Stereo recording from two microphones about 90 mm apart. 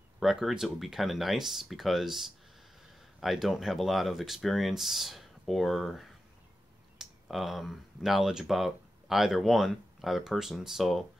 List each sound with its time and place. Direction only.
0.2 s speech: 5° right (ahead or behind)